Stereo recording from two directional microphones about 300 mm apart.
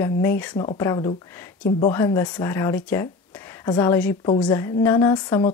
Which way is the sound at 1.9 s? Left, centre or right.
Centre.